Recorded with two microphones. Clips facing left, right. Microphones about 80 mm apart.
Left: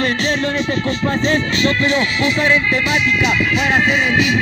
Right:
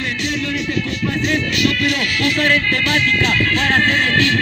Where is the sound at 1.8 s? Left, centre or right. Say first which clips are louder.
Left 3 dB; left; by 4.4 s centre.